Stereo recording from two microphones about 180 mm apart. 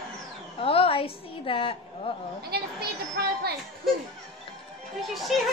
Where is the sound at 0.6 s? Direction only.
30° left (ahead or behind).